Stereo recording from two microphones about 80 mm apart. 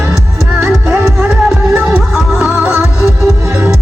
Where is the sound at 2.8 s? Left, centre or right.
Left.